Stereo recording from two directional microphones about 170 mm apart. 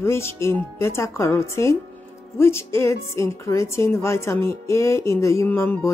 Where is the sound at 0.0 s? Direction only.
15° left (ahead or behind).